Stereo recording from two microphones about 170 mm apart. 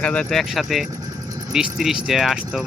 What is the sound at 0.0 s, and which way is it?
Speech, 5° left (ahead or behind).